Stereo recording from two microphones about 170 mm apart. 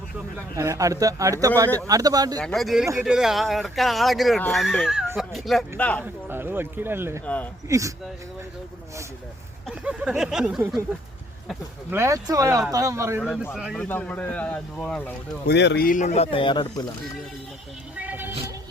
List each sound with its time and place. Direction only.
0.5 s speech: 20° right (ahead or behind)
2.4 s speech: centre (ahead or behind)
6.2 s speech: 10° right (ahead or behind)
9.6 s speech: 5° right (ahead or behind)
11.9 s speech: 15° right (ahead or behind)
13.2 s speech: centre (ahead or behind)
13.7 s speech: 10° left (ahead or behind)
15.4 s speech: 80° left; by 16.8 s 25° left (ahead or behind)
17.9 s vehicle: 10° right (ahead or behind)